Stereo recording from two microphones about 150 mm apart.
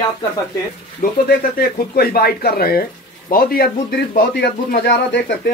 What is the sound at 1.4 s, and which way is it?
Speech, 85° left.